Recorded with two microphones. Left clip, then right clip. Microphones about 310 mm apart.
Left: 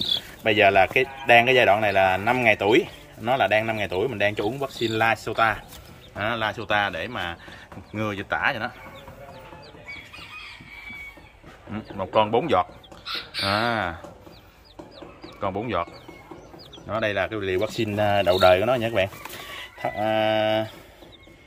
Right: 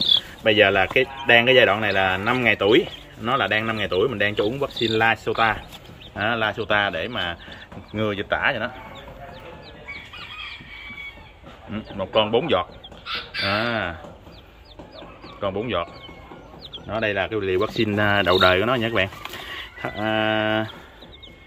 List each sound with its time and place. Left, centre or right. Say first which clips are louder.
0.4 s speech: left 2 dB; centre
11.7 s speech: right 1 dB; centre
13.0 s chicken: right 2 dB; left
13.5 s speech: even; centre
15.2 s speech: right 2 dB; centre
16.9 s speech: right 1 dB; centre